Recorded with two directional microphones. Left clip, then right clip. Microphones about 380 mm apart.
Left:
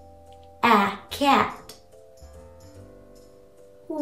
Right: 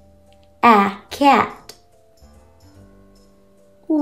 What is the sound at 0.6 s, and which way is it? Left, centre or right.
Music, centre.